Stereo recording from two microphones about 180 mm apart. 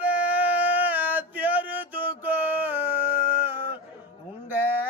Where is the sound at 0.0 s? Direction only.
10° right (ahead or behind).